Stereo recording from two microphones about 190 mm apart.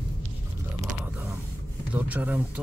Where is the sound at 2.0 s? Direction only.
10° right (ahead or behind).